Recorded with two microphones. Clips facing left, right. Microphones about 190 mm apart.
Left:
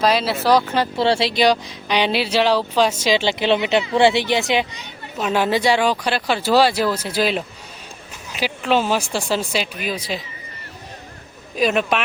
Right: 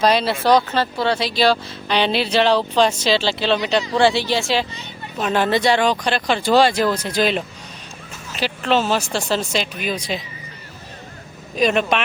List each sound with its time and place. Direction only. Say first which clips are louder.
0.0 s speech: right 1 dB; centre (ahead or behind)
0.9 s a woman's voice: left 4 dB; 25° left (ahead or behind); by 10.2 s 5° left (ahead or behind)
11.5 s speech: right 1 dB; 5° left (ahead or behind)